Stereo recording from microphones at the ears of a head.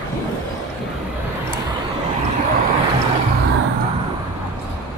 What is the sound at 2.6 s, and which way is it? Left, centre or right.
Vehicle, right.